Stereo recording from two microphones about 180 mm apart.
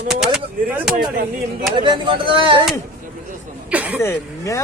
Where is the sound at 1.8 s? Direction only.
25° right (ahead or behind).